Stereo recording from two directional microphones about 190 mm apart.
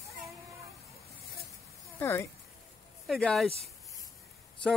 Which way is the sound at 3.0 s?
Centre (ahead or behind).